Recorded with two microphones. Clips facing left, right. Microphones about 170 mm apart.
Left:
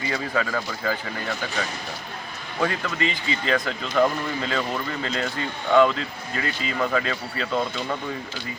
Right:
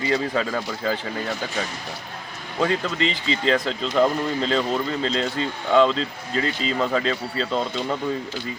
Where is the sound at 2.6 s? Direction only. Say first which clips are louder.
Right 3 dB; 25° right (ahead or behind).